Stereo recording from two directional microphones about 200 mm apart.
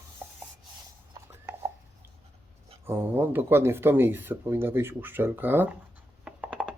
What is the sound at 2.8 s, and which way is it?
Speech, 10° right (ahead or behind).